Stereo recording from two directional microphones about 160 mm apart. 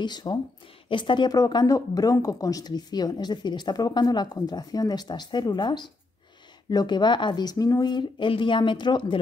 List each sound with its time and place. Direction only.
0.0 s speech: 25° left (ahead or behind)